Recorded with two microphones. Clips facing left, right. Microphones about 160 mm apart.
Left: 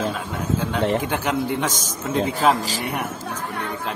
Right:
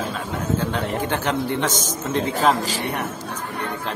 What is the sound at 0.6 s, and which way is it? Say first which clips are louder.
A man's voice: left 2 dB; 10° left (ahead or behind).